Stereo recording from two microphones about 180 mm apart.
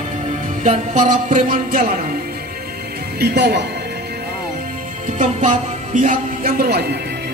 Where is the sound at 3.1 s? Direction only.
65° right (ahead or behind).